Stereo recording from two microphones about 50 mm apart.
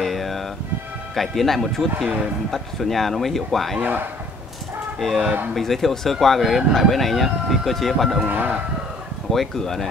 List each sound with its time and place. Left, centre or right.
0.0 s music: centre
1.1 s speech: centre
5.0 s speech: centre
8.2 s speech: right
9.3 s speech: centre